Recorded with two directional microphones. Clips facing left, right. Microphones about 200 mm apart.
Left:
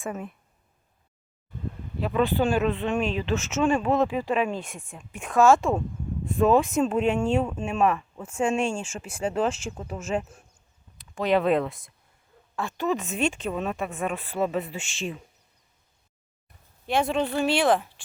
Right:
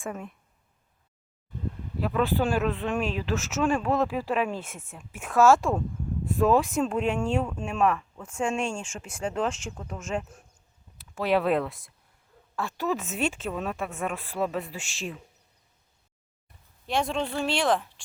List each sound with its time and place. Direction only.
0.0 s speech: 5° left (ahead or behind)
2.0 s speech: centre (ahead or behind)
10.9 s speech: 5° right (ahead or behind)
16.8 s speech: 5° left (ahead or behind)